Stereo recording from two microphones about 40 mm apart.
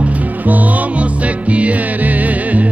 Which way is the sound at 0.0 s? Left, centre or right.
Right.